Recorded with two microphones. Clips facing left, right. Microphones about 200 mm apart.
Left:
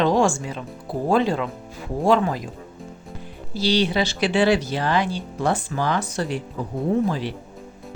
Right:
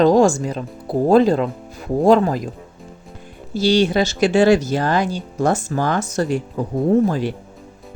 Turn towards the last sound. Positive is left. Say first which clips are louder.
# right 5 dB
turn(degrees=-45)  # may be behind; listen again after turning